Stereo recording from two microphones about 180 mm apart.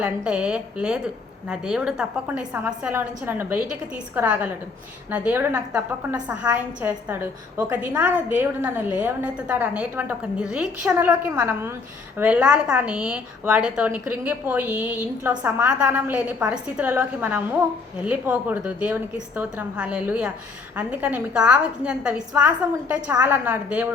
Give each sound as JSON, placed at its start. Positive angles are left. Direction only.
{"t": 0.0, "sound": "a woman's voice", "side_deg": -5}